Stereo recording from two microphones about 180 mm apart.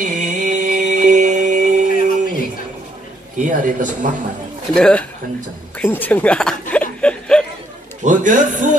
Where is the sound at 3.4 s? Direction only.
45° right (ahead or behind).